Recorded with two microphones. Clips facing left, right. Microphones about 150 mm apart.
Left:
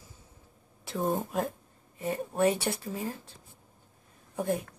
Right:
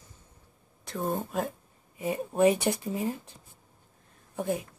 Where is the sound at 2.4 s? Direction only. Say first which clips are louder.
Right 4 dB; 15° right (ahead or behind).